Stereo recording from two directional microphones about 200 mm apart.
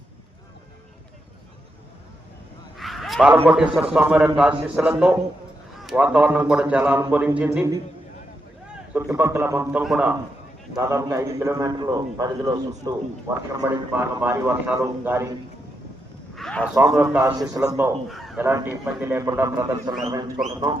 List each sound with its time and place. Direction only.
2.7 s a sound: centre (ahead or behind)
3.4 s a man's voice: 5° right (ahead or behind)
8.9 s a man's voice: 10° right (ahead or behind)
10.8 s a man's voice: 15° right (ahead or behind)
16.3 s a sound: 5° left (ahead or behind)
17.0 s a man's voice: 10° right (ahead or behind)
18.1 s crow: centre (ahead or behind)
18.4 s a man's voice: 10° right (ahead or behind)